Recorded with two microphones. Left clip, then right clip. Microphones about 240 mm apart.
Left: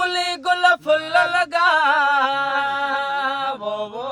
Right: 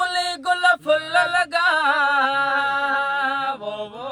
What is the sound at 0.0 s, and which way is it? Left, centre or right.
Male singing, centre.